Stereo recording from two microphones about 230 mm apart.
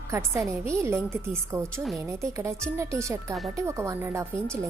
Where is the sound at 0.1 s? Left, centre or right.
Centre.